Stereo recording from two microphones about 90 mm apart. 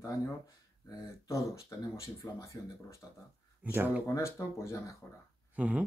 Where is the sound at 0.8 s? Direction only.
35° left (ahead or behind).